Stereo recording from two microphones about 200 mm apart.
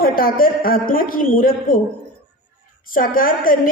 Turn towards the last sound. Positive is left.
turn(degrees=45)  # may be behind; listen again after turning